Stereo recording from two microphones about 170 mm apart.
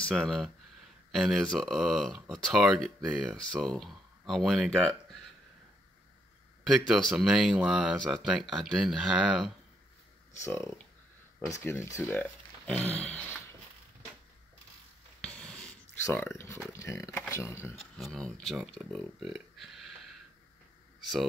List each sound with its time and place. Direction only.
0.0 s speech: centre (ahead or behind)
6.9 s speech: centre (ahead or behind)
10.3 s speech: 15° left (ahead or behind)
15.2 s a sound: 5° left (ahead or behind)
16.7 s speech: 15° left (ahead or behind)
17.9 s speech: centre (ahead or behind)